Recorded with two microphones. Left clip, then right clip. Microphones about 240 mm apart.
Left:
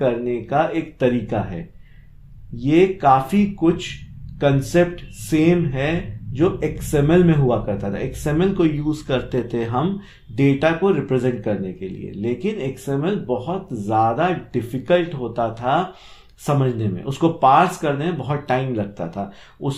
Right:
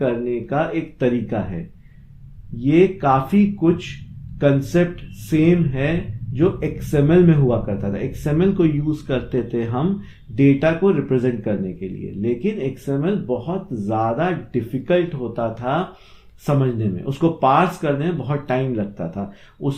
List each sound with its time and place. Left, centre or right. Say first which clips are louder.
0.0 s speech: left 1 dB; left
2.6 s speech: even; left